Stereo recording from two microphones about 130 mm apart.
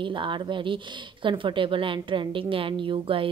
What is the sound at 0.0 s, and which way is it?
A woman's voice, 40° right (ahead or behind).